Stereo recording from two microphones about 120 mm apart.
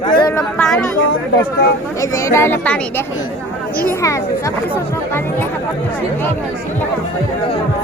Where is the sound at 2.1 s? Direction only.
20° left (ahead or behind).